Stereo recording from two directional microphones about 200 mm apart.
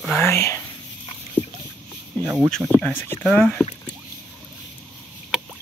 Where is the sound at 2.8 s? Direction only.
10° left (ahead or behind).